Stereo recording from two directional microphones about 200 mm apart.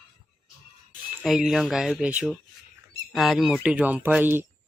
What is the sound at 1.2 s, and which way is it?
Speech, centre (ahead or behind).